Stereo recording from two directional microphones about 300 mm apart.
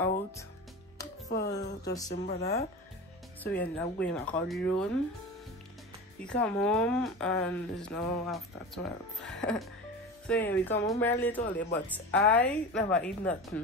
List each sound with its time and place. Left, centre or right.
1.3 s speech: left
3.5 s speech: centre
6.1 s speech: centre